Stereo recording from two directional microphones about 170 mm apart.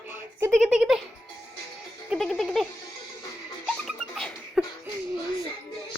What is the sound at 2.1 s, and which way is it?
Music, centre (ahead or behind).